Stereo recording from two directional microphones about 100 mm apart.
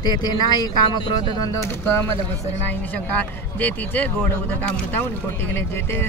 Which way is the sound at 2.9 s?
15° left (ahead or behind).